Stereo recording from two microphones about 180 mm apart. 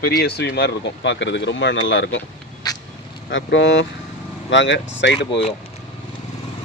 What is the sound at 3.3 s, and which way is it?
Speech, 85° left.